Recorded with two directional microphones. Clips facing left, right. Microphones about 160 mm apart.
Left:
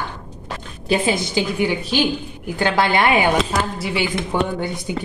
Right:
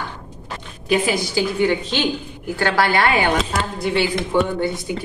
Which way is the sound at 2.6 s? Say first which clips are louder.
Left 1 dB; 20° left (ahead or behind).